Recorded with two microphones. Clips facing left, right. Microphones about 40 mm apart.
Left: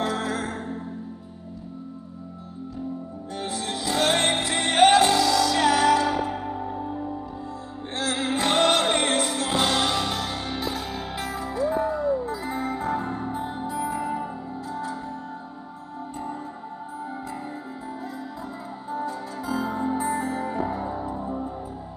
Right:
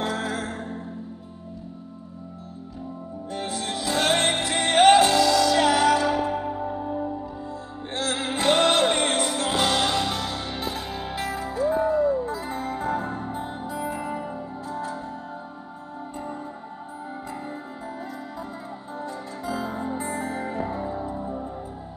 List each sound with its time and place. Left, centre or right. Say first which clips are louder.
0.0 s music: left 1 dB; centre
0.4 s music: left 1 dB; centre
3.4 s music: even; centre
13.9 s music: left 2 dB; centre
19.0 s music: left 2 dB; centre